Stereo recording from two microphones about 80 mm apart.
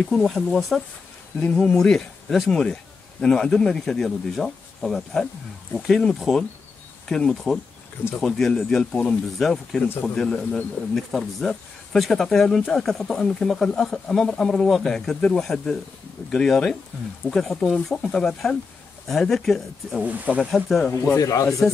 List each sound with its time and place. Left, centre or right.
0.0 s speech: centre
20.0 s speech: centre
20.5 s speech: centre
20.9 s speech: left
21.2 s speech: left